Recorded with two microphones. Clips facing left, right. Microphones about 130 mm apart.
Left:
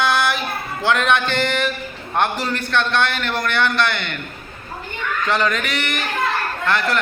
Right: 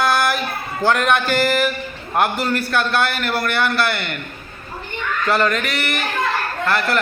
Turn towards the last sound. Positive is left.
turn(degrees=0)  # may be behind; listen again after turning